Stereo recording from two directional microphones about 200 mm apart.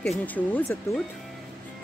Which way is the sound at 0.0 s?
5° left (ahead or behind).